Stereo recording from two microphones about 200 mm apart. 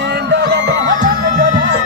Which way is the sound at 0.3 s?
55° right (ahead or behind).